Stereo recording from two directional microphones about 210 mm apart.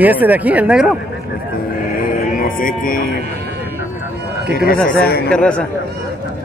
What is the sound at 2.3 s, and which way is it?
Speech, 40° left (ahead or behind).